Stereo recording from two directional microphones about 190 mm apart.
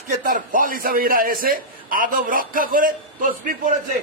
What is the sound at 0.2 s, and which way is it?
A man's voice, 45° right (ahead or behind).